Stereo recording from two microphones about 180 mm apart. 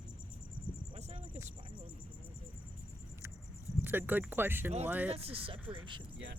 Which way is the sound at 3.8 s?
10° right (ahead or behind).